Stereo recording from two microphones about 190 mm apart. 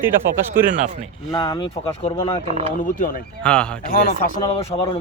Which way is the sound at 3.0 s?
50° left (ahead or behind).